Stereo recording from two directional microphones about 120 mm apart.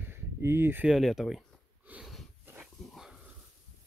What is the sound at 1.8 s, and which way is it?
Snort, 10° right (ahead or behind).